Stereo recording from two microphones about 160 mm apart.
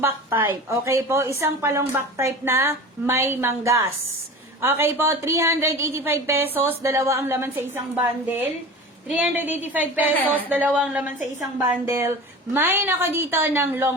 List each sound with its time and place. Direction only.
0.0 s a woman's voice: 15° right (ahead or behind)
9.0 s a woman's voice: 10° right (ahead or behind)
11.5 s a woman's voice: 15° right (ahead or behind)